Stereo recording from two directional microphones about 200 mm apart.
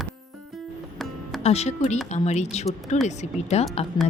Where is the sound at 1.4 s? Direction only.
30° left (ahead or behind).